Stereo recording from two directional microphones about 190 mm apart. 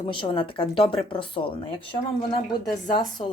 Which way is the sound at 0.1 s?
25° left (ahead or behind).